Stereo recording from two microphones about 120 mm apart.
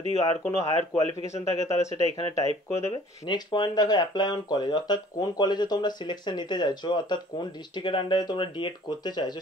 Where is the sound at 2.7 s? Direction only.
25° left (ahead or behind).